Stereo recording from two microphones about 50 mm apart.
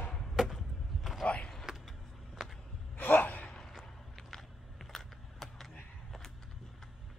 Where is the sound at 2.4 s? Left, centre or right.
Centre.